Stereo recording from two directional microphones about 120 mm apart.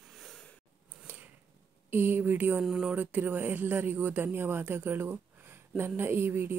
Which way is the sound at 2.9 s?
15° right (ahead or behind).